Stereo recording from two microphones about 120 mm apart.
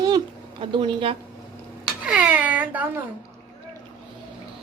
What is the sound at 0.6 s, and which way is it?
Speech, 45° right (ahead or behind).